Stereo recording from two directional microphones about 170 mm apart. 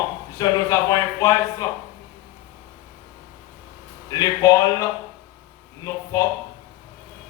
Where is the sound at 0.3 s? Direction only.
20° left (ahead or behind).